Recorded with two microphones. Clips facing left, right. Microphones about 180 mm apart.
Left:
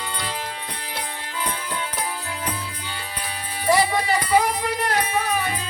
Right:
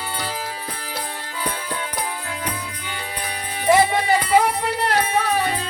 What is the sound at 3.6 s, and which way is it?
Music, 20° right (ahead or behind).